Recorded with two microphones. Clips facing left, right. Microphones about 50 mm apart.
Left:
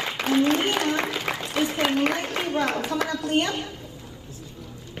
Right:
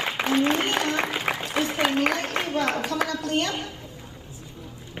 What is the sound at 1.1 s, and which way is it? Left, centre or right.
Applause, right.